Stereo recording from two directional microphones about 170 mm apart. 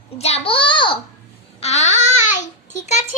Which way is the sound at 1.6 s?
40° left (ahead or behind).